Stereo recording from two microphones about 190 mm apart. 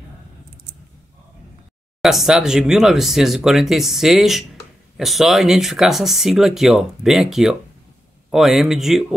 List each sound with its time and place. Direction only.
2.0 s speech: centre (ahead or behind)